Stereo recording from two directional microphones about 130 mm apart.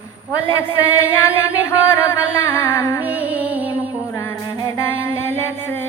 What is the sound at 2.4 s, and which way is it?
Music, 20° left (ahead or behind).